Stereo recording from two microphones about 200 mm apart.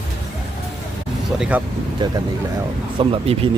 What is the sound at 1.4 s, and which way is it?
Speech, 5° right (ahead or behind).